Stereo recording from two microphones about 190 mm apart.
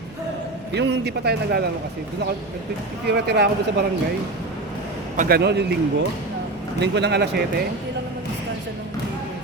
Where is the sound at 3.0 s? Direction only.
60° right (ahead or behind).